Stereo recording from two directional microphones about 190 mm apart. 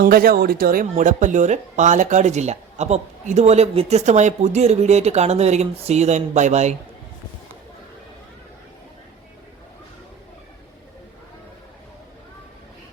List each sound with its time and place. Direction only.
0.0 s speech: 50° right (ahead or behind)